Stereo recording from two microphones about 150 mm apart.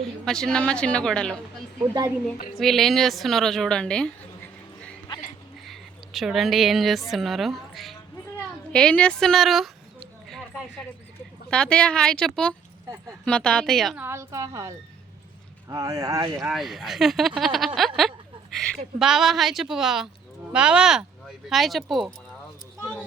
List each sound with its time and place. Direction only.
0.3 s a woman's voice: 5° left (ahead or behind)
1.8 s a woman's voice: 25° right (ahead or behind)
2.6 s a woman's voice: centre (ahead or behind)
6.1 s a woman's voice: centre (ahead or behind)
8.7 s chicken: 5° left (ahead or behind)
11.5 s a woman's voice: 5° left (ahead or behind)
13.9 s a woman's voice: 15° right (ahead or behind)
15.7 s a woman's voice: 20° right (ahead or behind)
16.4 s a woman's voice: centre (ahead or behind)